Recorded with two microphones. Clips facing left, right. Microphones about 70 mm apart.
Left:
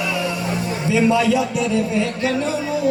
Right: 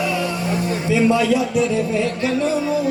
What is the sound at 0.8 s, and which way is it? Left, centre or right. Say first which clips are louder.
Speech: even; right.